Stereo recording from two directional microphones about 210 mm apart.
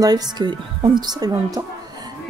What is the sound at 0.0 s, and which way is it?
Speech, 20° right (ahead or behind).